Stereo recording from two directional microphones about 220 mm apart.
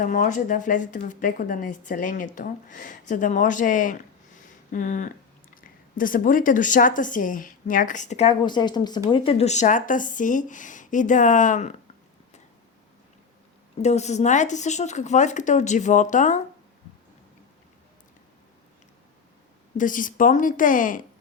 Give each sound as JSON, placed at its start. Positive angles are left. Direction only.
{"t": 0.0, "sound": "speech", "side_deg": 35}
{"t": 13.8, "sound": "speech", "side_deg": 30}
{"t": 19.7, "sound": "speech", "side_deg": 35}